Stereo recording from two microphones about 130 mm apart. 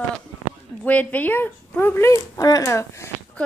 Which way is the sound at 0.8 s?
10° left (ahead or behind).